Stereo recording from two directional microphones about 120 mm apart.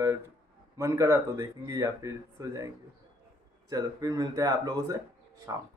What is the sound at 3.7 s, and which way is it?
Speech, 30° right (ahead or behind).